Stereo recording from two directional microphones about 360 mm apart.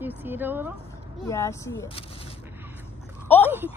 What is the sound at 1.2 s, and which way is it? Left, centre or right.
Speech, centre.